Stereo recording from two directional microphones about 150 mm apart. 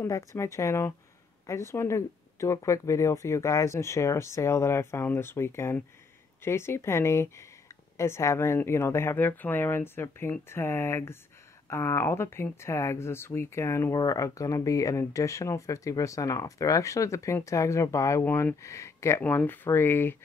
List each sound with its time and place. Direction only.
0.0 s speech: 20° left (ahead or behind)